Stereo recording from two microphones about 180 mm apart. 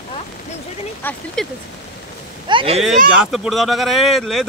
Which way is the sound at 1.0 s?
10° left (ahead or behind).